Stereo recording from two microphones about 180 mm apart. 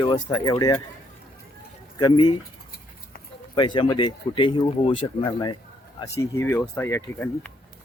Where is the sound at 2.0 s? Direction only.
25° left (ahead or behind).